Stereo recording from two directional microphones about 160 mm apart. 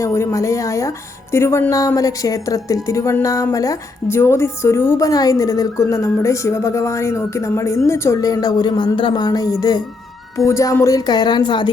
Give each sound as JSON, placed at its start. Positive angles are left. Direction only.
{"t": 0.0, "sound": "speech", "side_deg": 20}